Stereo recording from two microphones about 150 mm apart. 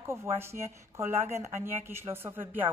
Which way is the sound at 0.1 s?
15° right (ahead or behind).